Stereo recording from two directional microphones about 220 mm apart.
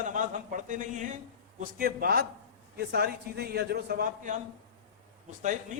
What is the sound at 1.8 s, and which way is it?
A man's voice, 45° right (ahead or behind).